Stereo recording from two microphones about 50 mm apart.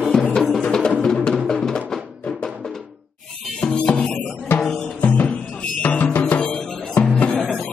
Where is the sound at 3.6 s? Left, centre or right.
Centre.